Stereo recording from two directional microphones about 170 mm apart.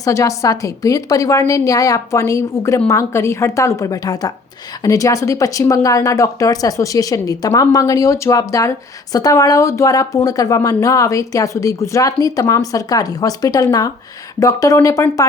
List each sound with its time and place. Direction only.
0.0 s speech: 20° left (ahead or behind)